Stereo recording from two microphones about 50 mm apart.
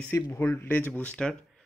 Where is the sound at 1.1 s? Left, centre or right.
Left.